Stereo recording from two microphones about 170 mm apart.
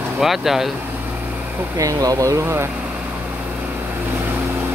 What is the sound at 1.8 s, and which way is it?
Speech, 20° right (ahead or behind).